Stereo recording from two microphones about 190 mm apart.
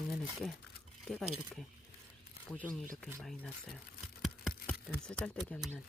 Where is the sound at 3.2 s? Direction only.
Centre (ahead or behind).